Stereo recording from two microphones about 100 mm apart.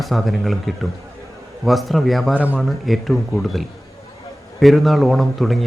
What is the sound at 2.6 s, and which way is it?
Speech, centre (ahead or behind).